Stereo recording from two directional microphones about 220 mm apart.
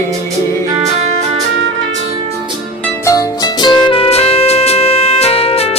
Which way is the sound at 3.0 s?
15° left (ahead or behind).